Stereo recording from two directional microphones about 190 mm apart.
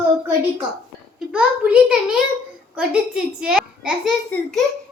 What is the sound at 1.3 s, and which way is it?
A woman's voice, 5° right (ahead or behind).